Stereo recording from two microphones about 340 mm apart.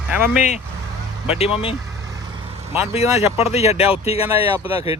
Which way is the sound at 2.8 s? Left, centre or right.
Centre.